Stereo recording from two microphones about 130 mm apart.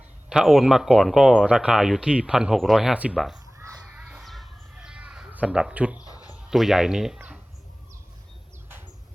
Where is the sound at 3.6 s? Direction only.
15° right (ahead or behind).